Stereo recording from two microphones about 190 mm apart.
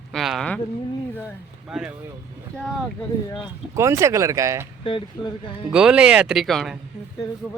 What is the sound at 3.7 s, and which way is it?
Speech, 15° right (ahead or behind).